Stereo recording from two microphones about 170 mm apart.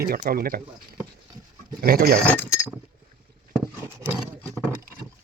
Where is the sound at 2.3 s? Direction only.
15° left (ahead or behind).